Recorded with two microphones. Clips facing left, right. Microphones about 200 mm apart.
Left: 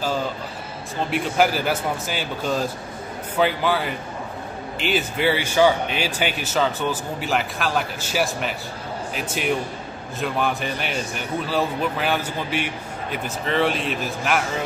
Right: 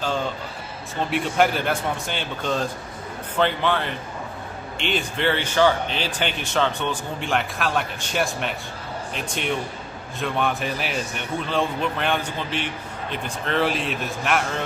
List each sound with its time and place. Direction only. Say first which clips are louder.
0.0 s a man's voice: left 1 dB; 5° left (ahead or behind)